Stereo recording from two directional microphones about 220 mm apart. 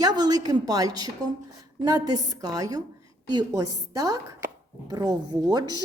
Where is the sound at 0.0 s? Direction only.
15° right (ahead or behind).